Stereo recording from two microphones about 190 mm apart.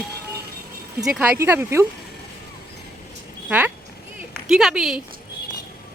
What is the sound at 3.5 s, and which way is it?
Speech, 10° right (ahead or behind).